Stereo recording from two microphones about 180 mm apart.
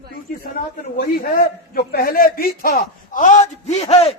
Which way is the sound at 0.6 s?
50° left (ahead or behind).